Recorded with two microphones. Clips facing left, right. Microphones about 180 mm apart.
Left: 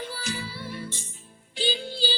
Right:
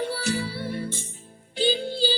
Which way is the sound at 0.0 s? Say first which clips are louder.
Right 7 dB; 65° right (ahead or behind).